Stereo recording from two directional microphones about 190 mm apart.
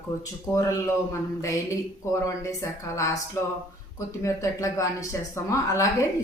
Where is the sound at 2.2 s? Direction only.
15° left (ahead or behind).